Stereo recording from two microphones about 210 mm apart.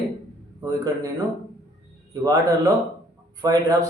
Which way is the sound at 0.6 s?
15° right (ahead or behind).